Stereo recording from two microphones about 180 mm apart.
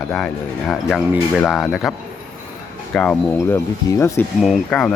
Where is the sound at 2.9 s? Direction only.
10° left (ahead or behind).